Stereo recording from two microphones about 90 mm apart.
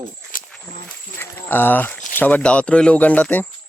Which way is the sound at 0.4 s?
10° left (ahead or behind).